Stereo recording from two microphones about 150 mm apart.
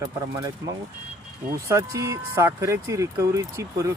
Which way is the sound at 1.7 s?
20° right (ahead or behind).